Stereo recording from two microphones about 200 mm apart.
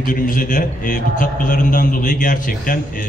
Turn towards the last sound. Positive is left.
turn(degrees=45)  # may be behind; listen again after turning